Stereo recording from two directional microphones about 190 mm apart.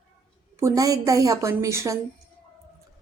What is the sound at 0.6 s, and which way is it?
A woman's voice, 15° right (ahead or behind).